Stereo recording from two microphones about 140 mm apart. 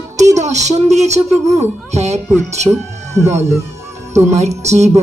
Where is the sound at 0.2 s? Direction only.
55° right (ahead or behind).